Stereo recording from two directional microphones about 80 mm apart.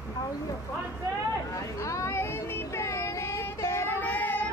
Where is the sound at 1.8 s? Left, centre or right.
Left.